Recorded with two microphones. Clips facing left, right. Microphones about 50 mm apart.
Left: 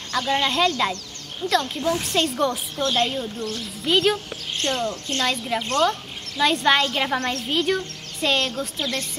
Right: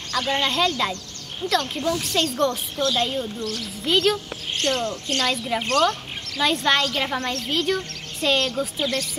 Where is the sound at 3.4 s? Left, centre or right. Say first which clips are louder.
Even; left.